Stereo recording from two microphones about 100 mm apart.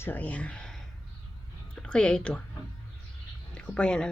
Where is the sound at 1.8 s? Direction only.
10° left (ahead or behind).